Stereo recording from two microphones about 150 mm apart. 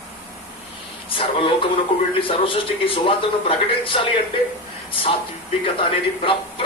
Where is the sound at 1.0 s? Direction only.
35° left (ahead or behind).